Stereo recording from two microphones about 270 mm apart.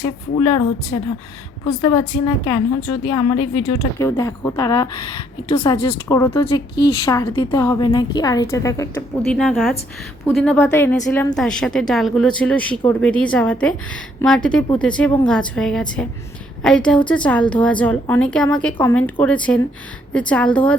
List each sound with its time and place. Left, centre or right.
0.0 s a woman's voice: centre